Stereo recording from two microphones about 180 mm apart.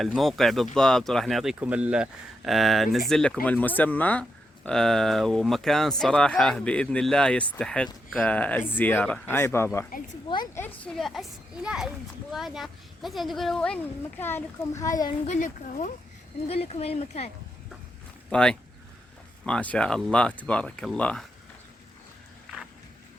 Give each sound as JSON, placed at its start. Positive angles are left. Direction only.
{"t": 0.0, "sound": "speech", "side_deg": 0}
{"t": 9.9, "sound": "speech", "side_deg": 50}
{"t": 10.2, "sound": "a woman's voice", "side_deg": 25}
{"t": 10.8, "sound": "speech", "side_deg": 0}
{"t": 15.3, "sound": "speech", "side_deg": 40}
{"t": 18.3, "sound": "speech", "side_deg": 5}